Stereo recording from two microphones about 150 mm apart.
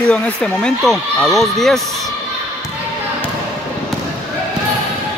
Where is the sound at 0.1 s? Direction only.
5° left (ahead or behind).